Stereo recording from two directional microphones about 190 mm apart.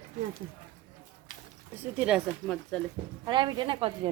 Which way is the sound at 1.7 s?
10° right (ahead or behind).